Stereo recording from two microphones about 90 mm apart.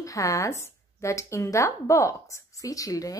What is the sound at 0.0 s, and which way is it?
Speech, 40° left (ahead or behind).